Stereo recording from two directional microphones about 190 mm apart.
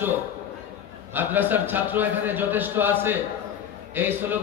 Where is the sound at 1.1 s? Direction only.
10° right (ahead or behind).